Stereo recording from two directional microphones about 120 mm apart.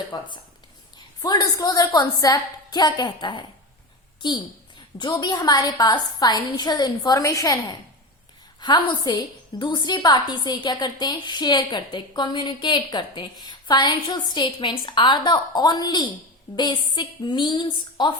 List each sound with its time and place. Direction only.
0.1 s a woman's voice: 35° left (ahead or behind)
4.9 s a woman's voice: 35° left (ahead or behind)